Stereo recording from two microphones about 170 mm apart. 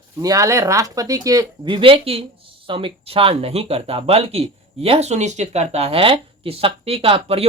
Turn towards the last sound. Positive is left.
turn(degrees=-35)  # may be behind; listen again after turning